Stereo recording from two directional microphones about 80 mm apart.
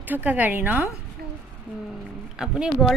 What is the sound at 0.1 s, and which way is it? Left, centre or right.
Speech, right.